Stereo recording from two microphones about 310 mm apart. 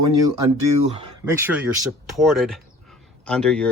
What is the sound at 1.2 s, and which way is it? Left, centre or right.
Speech, centre.